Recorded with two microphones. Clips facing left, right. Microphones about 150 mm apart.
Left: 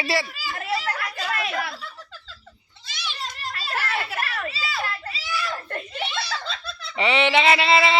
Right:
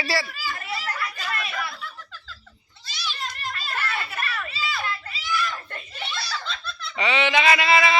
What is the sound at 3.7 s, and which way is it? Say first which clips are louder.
Children playing: left 4 dB; 75° left (ahead or behind).